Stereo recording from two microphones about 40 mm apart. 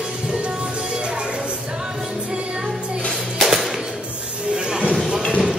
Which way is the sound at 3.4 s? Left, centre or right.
Centre.